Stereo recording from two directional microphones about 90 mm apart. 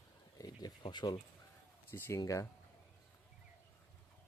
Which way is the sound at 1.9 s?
35° left (ahead or behind).